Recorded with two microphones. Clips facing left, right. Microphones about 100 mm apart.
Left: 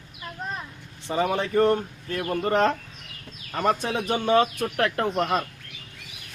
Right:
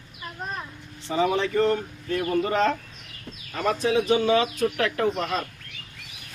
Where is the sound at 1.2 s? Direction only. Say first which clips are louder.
Even; 50° left (ahead or behind).